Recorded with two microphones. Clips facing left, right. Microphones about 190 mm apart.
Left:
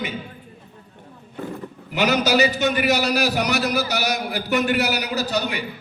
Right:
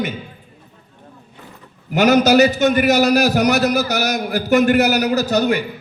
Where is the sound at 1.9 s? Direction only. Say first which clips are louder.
Right 7 dB; 45° right (ahead or behind).